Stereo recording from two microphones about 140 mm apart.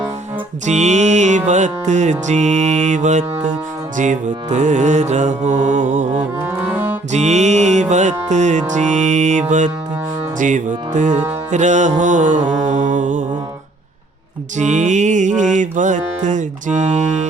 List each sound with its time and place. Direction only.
0.6 s music: 55° right (ahead or behind)
6.4 s music: 15° right (ahead or behind)
7.1 s music: 55° right (ahead or behind)
14.6 s music: 55° right (ahead or behind)